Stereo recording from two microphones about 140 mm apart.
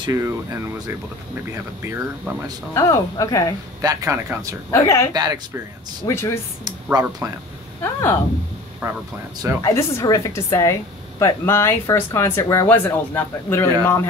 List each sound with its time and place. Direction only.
0.0 s speech: 25° right (ahead or behind)
2.7 s speech: 20° left (ahead or behind)
3.8 s speech: 25° right (ahead or behind)
4.6 s speech: 20° left (ahead or behind)
5.1 s speech: 25° right (ahead or behind)
6.0 s speech: 20° left (ahead or behind)
6.6 s speech: 25° right (ahead or behind)
7.8 s speech: 15° left (ahead or behind)
8.8 s speech: 20° right (ahead or behind)
9.6 s speech: 25° left (ahead or behind)